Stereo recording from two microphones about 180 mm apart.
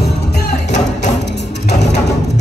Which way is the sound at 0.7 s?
40° left (ahead or behind).